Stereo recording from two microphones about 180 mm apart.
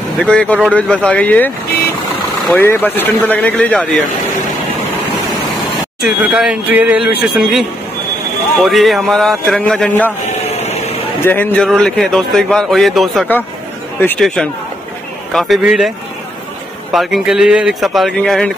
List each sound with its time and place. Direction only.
0.2 s a man's voice: 5° left (ahead or behind)
6.0 s a man's voice: 5° right (ahead or behind)
10.5 s vehicle: 35° left (ahead or behind)
11.2 s a man's voice: 10° left (ahead or behind)
16.9 s a man's voice: centre (ahead or behind)